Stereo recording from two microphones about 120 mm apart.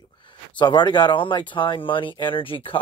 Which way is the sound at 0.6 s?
40° left (ahead or behind).